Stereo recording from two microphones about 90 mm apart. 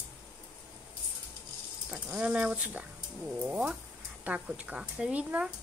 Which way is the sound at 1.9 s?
10° right (ahead or behind).